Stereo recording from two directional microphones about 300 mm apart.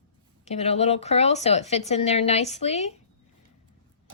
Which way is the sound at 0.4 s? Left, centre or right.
Left.